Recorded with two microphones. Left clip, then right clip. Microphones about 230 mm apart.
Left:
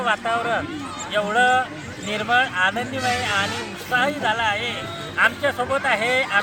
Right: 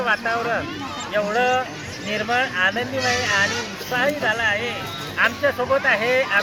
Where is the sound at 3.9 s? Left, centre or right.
Centre.